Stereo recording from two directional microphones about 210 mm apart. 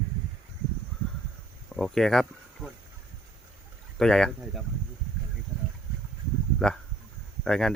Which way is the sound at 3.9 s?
5° left (ahead or behind).